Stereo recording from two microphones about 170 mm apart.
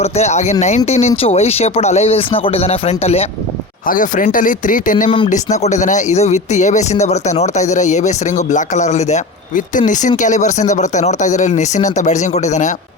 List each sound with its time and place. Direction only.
0.0 s speech: 40° left (ahead or behind)
3.8 s speech: 50° left (ahead or behind)